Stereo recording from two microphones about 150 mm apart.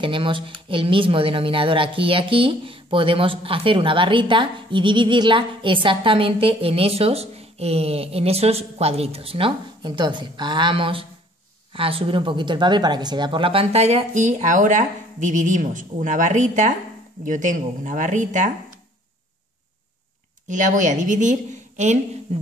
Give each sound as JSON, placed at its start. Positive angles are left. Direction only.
{"t": 0.0, "sound": "a woman's voice", "side_deg": -35}
{"t": 20.4, "sound": "a woman's voice", "side_deg": -55}
{"t": 22.3, "sound": "beatboxing", "side_deg": -45}